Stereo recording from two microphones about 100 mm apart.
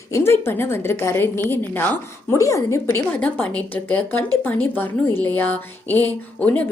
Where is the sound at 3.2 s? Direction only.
15° left (ahead or behind).